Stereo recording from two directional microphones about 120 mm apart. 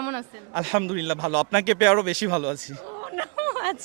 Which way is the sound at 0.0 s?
25° right (ahead or behind).